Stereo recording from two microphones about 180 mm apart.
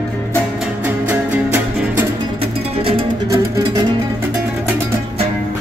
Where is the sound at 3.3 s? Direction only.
20° right (ahead or behind).